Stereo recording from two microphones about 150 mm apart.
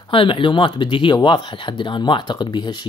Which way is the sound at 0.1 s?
35° left (ahead or behind).